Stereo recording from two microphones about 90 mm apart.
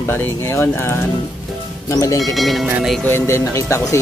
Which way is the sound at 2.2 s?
Centre (ahead or behind).